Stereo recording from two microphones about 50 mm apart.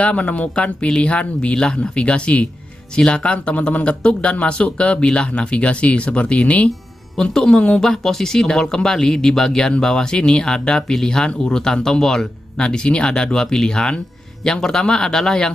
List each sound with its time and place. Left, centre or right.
0.0 s speech: left
7.2 s speech: centre
7.8 s speech: centre